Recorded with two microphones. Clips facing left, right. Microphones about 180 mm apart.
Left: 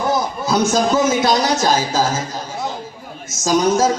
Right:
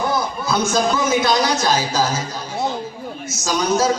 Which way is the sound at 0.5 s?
40° left (ahead or behind).